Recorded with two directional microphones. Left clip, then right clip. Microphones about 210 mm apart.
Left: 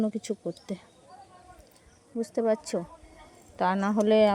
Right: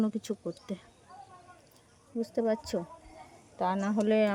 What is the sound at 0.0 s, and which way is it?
Speech, 10° left (ahead or behind).